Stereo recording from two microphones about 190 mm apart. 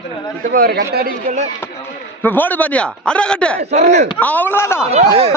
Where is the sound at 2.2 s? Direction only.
10° left (ahead or behind).